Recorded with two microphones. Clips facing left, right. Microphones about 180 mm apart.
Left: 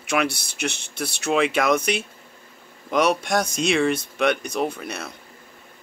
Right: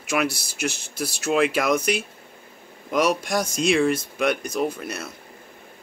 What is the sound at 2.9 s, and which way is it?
Speech, 5° right (ahead or behind).